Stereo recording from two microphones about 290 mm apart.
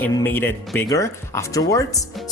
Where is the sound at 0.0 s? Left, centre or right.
Centre.